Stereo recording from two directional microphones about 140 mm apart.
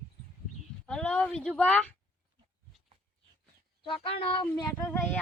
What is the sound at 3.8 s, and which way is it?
Speech, 40° left (ahead or behind).